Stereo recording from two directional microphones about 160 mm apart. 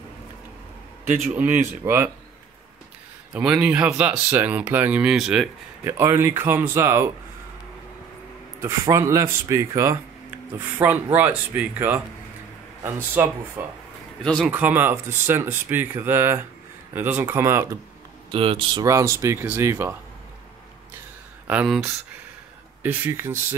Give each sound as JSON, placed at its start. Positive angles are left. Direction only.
{"t": 1.2, "sound": "speech", "side_deg": -10}
{"t": 3.3, "sound": "speech", "side_deg": -5}
{"t": 5.9, "sound": "speech", "side_deg": -15}
{"t": 8.5, "sound": "speech", "side_deg": -15}
{"t": 14.2, "sound": "speech", "side_deg": 5}
{"t": 14.5, "sound": "speech", "side_deg": -10}
{"t": 18.3, "sound": "speech", "side_deg": -35}
{"t": 18.9, "sound": "speech", "side_deg": -20}
{"t": 21.5, "sound": "speech", "side_deg": -5}
{"t": 22.8, "sound": "speech", "side_deg": -10}